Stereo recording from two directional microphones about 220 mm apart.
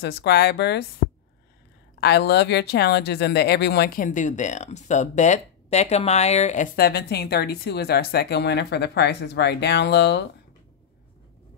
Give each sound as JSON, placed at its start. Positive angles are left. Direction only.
{"t": 0.0, "sound": "speech", "side_deg": 50}
{"t": 2.0, "sound": "speech", "side_deg": 50}